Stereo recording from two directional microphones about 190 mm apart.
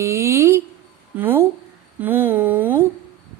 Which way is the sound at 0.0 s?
15° right (ahead or behind).